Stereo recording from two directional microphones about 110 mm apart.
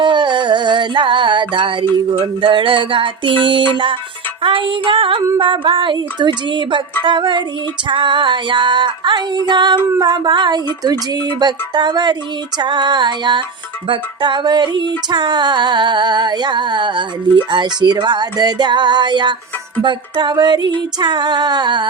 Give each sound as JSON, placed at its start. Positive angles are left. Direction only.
{"t": 0.0, "sound": "a sound", "side_deg": -45}
{"t": 4.4, "sound": "music", "side_deg": -50}
{"t": 10.0, "sound": "female singing", "side_deg": -40}
{"t": 12.5, "sound": "music", "side_deg": -40}
{"t": 19.8, "sound": "female singing", "side_deg": -45}